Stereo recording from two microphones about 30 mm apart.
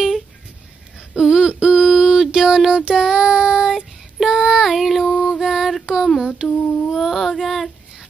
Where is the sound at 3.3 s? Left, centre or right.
Right.